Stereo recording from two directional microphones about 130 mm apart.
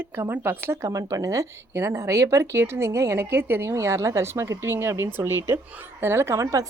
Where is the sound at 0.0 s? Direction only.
15° right (ahead or behind).